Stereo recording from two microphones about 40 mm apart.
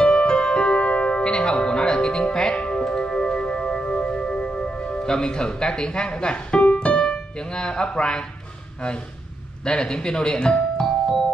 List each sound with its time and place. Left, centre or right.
0.0 s music: left
9.7 s speech: left